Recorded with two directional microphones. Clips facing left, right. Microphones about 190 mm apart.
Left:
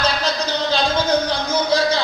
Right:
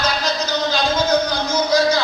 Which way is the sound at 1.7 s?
30° left (ahead or behind).